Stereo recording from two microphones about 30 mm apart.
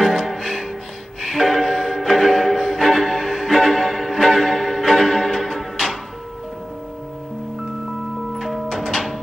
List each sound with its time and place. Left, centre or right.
0.0 s music: centre
0.3 s music: centre
8.4 s music: centre
8.6 s music: centre